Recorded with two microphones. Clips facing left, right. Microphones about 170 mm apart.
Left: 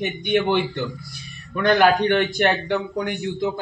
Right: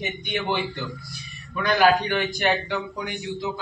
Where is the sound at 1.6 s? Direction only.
60° left (ahead or behind).